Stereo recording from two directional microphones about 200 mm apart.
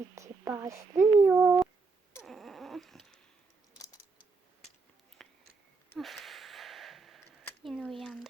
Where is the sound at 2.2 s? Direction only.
Centre (ahead or behind).